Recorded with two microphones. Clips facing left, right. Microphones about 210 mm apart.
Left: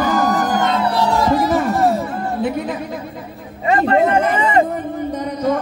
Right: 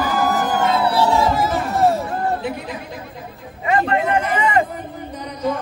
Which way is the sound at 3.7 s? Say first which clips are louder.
Left 4 dB; 35° left (ahead or behind).